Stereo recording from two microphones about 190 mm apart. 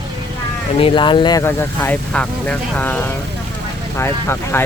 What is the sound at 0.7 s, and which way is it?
Speech, 25° left (ahead or behind).